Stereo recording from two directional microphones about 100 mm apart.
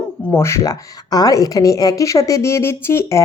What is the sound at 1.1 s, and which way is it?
A woman's voice, 40° left (ahead or behind).